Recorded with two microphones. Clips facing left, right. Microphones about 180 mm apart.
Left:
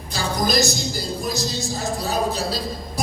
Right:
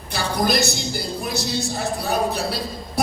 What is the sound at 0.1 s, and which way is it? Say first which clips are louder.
A woman's voice: right 1 dB; 60° right (ahead or behind).